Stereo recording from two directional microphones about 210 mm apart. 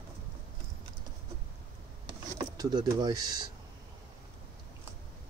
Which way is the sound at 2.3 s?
20° right (ahead or behind).